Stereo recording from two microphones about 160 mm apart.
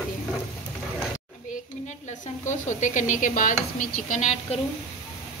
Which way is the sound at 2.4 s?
50° left (ahead or behind).